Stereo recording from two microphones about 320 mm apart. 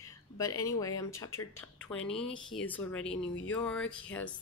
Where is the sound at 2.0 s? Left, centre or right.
Centre.